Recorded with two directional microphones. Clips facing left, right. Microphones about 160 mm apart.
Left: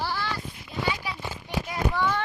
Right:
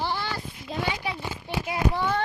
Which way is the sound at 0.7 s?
90° right.